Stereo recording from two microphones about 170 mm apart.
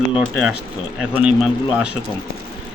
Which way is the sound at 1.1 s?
5° right (ahead or behind).